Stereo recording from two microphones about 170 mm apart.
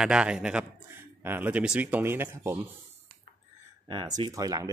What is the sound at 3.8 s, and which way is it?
Speech, 30° right (ahead or behind).